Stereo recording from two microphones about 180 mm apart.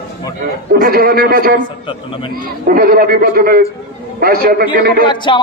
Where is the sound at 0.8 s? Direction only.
55° right (ahead or behind).